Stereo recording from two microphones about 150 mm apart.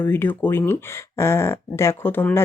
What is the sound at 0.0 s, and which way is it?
Speech, 15° left (ahead or behind).